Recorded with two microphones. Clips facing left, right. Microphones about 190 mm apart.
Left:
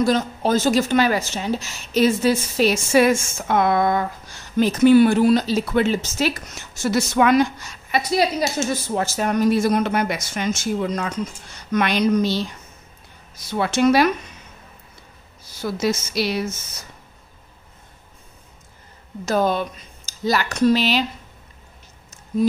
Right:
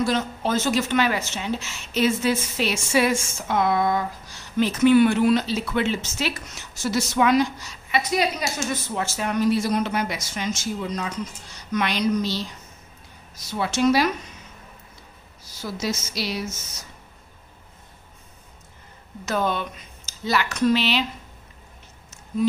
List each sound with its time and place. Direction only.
0.0 s a woman's voice: 40° left (ahead or behind)
8.1 s a woman's voice: 35° left (ahead or behind); by 12.4 s 55° left (ahead or behind)
13.5 s a woman's voice: 55° left (ahead or behind)
15.6 s a woman's voice: 55° left (ahead or behind)
19.2 s a woman's voice: 40° left (ahead or behind)